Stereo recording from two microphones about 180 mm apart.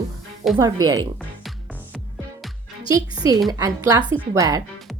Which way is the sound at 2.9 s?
20° right (ahead or behind).